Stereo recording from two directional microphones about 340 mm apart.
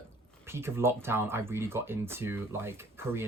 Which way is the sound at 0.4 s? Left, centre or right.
Centre.